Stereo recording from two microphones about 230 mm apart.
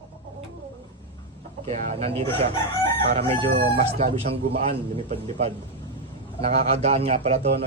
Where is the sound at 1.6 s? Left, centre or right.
Right.